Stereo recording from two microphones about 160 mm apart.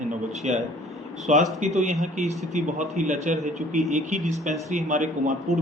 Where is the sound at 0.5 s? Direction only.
45° right (ahead or behind).